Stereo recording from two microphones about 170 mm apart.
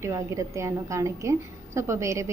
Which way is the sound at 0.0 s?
15° right (ahead or behind).